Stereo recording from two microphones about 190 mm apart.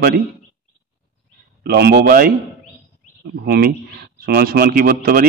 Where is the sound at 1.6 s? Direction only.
55° right (ahead or behind).